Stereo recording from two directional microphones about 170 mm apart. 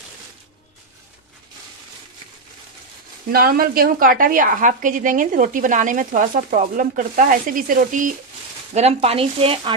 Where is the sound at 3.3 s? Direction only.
60° right (ahead or behind).